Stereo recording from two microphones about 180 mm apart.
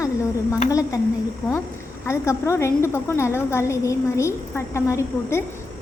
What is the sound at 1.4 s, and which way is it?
Speech, centre (ahead or behind).